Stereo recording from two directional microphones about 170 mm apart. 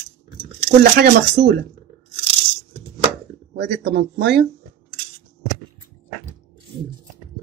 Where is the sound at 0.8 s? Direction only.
60° right (ahead or behind).